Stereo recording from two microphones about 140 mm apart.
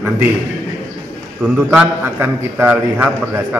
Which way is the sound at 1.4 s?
5° right (ahead or behind).